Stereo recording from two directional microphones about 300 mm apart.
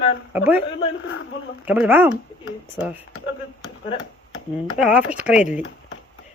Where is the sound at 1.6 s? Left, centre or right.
Centre.